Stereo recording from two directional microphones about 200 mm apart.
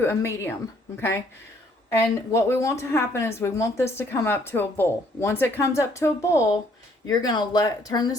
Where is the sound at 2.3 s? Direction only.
15° left (ahead or behind).